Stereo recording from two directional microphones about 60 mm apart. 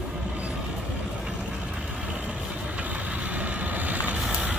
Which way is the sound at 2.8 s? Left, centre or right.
Right.